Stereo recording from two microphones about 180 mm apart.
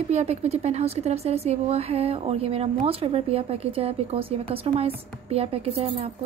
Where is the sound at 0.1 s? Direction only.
35° right (ahead or behind).